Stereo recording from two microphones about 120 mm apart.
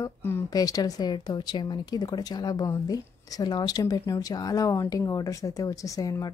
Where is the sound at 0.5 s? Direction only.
30° left (ahead or behind).